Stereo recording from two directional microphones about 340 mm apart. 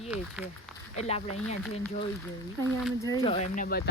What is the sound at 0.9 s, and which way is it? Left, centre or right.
Speech, centre.